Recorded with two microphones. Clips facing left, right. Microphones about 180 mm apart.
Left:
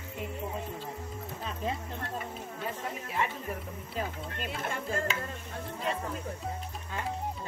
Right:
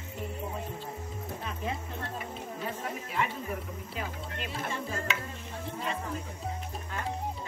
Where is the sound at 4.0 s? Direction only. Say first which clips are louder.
Left 3 dB; 40° left (ahead or behind).